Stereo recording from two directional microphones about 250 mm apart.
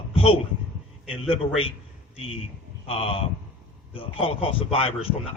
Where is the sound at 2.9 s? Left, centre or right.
Left.